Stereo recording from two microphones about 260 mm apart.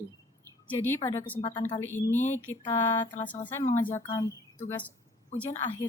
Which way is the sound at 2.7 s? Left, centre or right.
Left.